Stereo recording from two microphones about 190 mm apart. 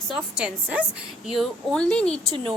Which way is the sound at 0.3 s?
5° right (ahead or behind).